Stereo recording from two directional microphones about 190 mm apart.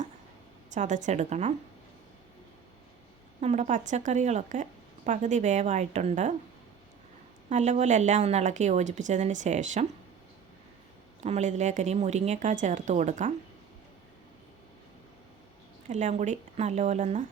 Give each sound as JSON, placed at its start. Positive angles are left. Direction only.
{"t": 0.7, "sound": "a woman's voice", "side_deg": -40}
{"t": 3.4, "sound": "a woman's voice", "side_deg": -35}
{"t": 7.5, "sound": "a woman's voice", "side_deg": -35}
{"t": 11.2, "sound": "a woman's voice", "side_deg": -40}
{"t": 15.9, "sound": "a woman's voice", "side_deg": -40}